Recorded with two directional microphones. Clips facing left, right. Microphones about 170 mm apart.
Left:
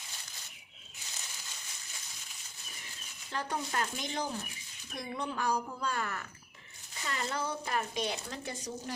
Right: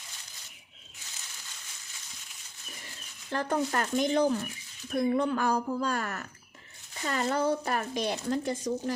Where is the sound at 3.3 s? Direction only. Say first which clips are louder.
Right 7 dB; 50° right (ahead or behind).